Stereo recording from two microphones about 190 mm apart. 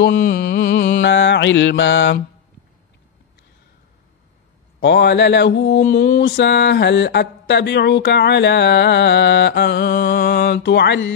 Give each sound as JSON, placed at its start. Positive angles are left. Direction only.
{"t": 0.1, "sound": "music", "side_deg": 50}
{"t": 1.0, "sound": "mantra", "side_deg": 70}
{"t": 4.7, "sound": "mantra", "side_deg": 65}